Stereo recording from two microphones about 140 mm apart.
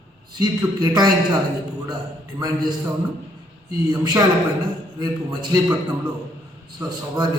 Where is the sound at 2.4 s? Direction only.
30° right (ahead or behind).